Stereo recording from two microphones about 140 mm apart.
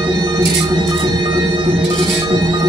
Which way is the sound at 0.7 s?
30° right (ahead or behind).